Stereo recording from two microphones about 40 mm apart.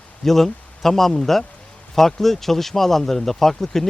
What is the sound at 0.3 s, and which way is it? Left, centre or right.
Speech, centre.